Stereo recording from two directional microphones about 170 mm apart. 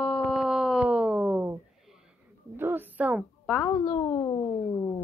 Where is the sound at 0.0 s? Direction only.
Centre (ahead or behind).